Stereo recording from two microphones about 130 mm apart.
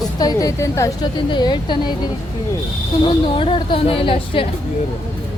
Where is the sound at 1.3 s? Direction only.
35° left (ahead or behind).